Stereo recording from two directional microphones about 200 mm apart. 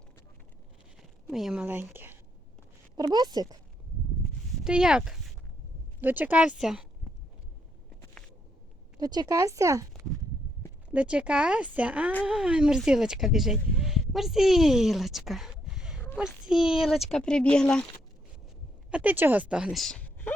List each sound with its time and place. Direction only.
1.3 s speech: centre (ahead or behind); by 3.6 s 20° right (ahead or behind)
4.6 s a child's voice: 5° right (ahead or behind)
9.0 s speech: 20° right (ahead or behind)
10.9 s a child's voice: 5° right (ahead or behind)
18.9 s speech: 5° right (ahead or behind)